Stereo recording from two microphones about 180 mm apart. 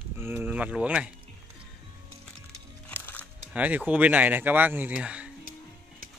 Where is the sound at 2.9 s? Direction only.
10° left (ahead or behind).